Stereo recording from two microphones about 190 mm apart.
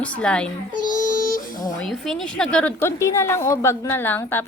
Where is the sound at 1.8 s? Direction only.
Centre (ahead or behind).